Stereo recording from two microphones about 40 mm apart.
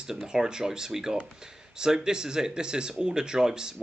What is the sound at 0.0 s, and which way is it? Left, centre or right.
Speech, centre.